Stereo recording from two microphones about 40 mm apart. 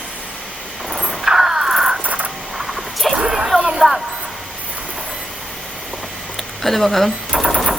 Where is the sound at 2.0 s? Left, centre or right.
Right.